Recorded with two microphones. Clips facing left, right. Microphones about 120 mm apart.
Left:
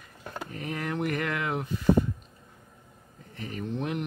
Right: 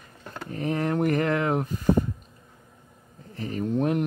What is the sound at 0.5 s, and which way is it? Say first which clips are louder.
Speech: right 8 dB; 35° right (ahead or behind).